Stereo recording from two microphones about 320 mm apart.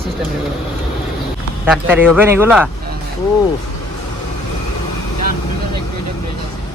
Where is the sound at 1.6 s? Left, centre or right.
Centre.